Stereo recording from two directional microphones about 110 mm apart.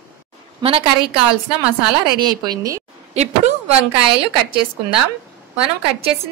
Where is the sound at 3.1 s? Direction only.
85° right.